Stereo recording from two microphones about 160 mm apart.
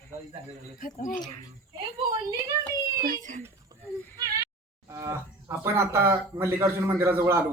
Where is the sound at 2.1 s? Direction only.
20° right (ahead or behind).